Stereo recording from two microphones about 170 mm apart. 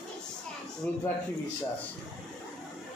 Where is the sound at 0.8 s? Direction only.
10° left (ahead or behind).